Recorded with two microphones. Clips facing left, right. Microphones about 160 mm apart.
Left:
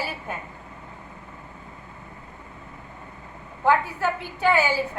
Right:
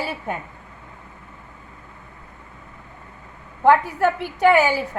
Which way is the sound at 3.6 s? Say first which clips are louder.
Right 5 dB; 65° right (ahead or behind).